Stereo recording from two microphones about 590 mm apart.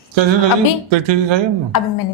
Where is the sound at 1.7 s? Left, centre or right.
Left.